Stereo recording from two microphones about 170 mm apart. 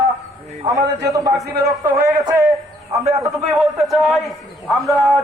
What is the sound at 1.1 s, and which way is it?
Speech, 20° right (ahead or behind).